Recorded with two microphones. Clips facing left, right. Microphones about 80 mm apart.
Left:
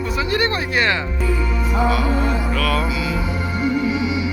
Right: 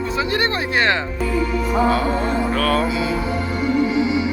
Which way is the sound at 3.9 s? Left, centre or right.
Right.